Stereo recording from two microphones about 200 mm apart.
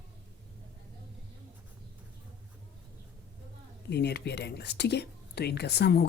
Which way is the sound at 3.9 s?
55° left (ahead or behind).